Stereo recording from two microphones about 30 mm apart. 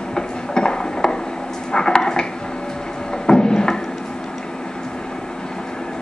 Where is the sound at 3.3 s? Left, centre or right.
Left.